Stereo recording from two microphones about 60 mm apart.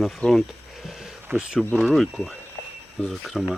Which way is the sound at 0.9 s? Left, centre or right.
Centre.